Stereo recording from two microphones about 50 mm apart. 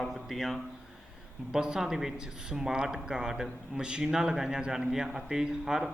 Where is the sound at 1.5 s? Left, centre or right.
Centre.